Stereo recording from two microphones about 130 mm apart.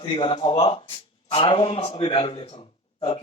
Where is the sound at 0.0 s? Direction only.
40° left (ahead or behind).